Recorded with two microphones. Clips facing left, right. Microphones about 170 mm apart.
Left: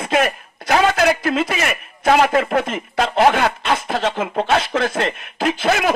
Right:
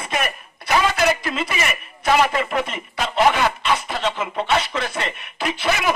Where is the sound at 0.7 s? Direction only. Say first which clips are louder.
Left 3 dB; 60° left (ahead or behind).